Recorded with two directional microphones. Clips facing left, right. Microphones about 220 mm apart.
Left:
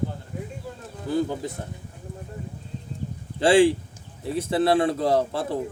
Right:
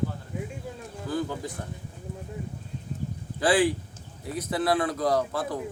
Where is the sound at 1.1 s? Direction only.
20° left (ahead or behind).